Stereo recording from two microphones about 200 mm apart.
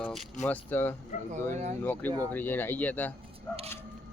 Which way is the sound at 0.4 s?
10° left (ahead or behind).